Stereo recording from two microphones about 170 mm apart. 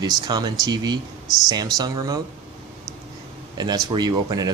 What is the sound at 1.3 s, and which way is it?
Speech, centre (ahead or behind).